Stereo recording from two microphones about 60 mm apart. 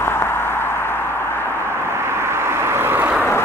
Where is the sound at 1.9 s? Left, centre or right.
Right.